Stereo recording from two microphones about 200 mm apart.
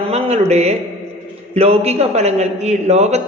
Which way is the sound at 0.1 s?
30° right (ahead or behind).